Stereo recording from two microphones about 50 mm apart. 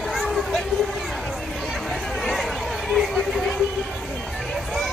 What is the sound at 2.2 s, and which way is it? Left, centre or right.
Chatter, centre.